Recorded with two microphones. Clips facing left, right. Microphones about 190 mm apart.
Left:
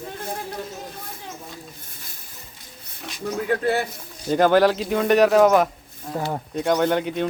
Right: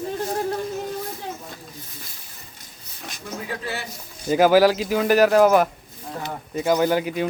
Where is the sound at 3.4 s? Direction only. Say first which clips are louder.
Left 10 dB; 55° left (ahead or behind).